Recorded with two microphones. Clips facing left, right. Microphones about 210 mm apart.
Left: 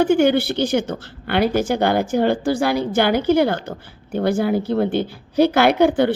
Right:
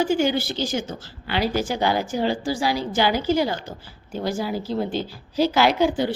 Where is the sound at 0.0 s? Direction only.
60° left (ahead or behind).